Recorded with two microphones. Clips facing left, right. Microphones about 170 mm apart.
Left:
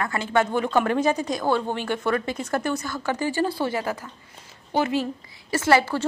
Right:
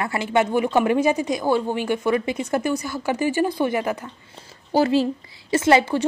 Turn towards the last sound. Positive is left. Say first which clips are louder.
# right 3 dB
turn(degrees=-20)  # may be behind; listen again after turning